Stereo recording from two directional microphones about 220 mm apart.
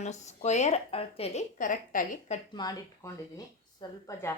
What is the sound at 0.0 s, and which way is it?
A woman's voice, 30° left (ahead or behind).